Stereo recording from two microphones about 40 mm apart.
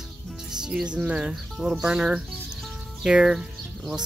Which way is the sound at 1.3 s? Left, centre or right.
Centre.